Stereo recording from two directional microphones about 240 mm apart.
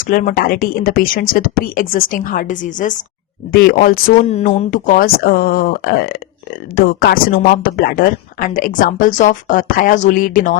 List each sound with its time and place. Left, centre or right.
0.1 s a woman's voice: left